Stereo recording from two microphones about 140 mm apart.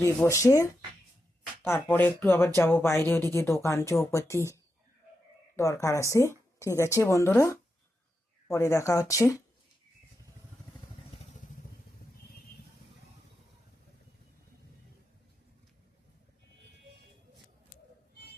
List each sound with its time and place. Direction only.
0.3 s speech: 20° left (ahead or behind)
5.5 s speech: 20° left (ahead or behind)